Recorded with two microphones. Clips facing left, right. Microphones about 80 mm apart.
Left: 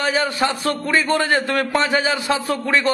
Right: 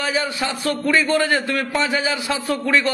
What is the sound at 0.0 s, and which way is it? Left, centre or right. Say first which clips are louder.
A man's voice: left 3 dB; left.